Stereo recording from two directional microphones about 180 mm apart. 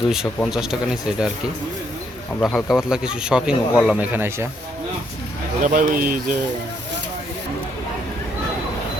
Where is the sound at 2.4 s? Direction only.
Centre (ahead or behind).